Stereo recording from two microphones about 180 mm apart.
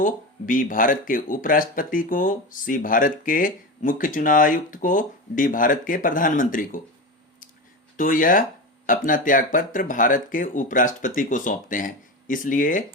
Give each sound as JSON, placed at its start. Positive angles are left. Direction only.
{"t": 0.0, "sound": "speech", "side_deg": 45}
{"t": 7.9, "sound": "speech", "side_deg": 50}